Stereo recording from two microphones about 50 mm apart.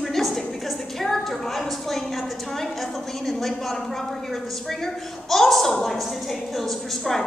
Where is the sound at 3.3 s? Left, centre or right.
Centre.